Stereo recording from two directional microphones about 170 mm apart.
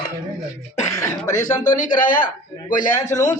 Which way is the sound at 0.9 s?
20° left (ahead or behind).